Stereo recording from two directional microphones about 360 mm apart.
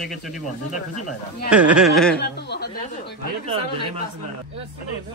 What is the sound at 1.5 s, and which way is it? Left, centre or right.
Speech, centre.